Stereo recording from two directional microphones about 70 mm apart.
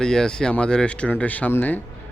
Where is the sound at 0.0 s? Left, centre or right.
Centre.